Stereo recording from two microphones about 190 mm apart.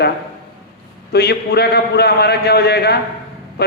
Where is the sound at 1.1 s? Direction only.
60° left (ahead or behind).